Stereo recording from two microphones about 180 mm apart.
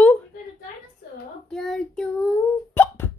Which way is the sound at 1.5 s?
5° left (ahead or behind).